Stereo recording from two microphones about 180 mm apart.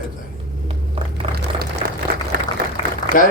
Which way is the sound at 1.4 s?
70° right (ahead or behind).